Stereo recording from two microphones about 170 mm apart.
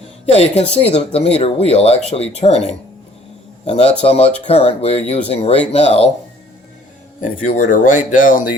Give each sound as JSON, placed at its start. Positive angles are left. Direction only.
{"t": 0.3, "sound": "speech", "side_deg": 40}
{"t": 3.7, "sound": "speech", "side_deg": 40}
{"t": 7.2, "sound": "speech", "side_deg": 50}